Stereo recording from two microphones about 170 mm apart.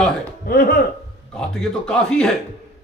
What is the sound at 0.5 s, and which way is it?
Speech, 60° left (ahead or behind).